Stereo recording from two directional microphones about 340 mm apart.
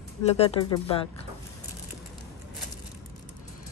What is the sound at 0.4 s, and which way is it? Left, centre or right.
Speech, centre.